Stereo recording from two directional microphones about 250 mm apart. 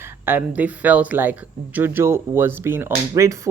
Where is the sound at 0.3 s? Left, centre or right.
Centre.